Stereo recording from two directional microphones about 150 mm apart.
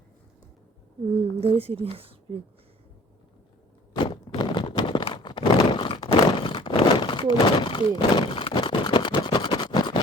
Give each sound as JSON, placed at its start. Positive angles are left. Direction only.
{"t": 1.0, "sound": "speech", "side_deg": -40}
{"t": 3.9, "sound": "horse", "side_deg": 35}